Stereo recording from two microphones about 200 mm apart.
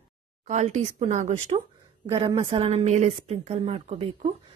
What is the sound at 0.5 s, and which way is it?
A woman's voice, 35° right (ahead or behind).